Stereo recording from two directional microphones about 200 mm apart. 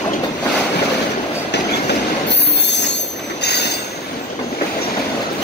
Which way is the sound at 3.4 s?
55° left (ahead or behind).